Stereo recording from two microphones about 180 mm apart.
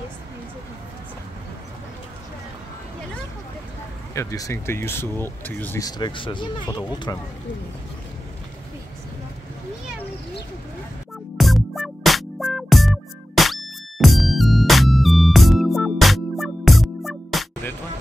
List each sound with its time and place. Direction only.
4.1 s speech: 15° left (ahead or behind)
11.3 s music: centre (ahead or behind)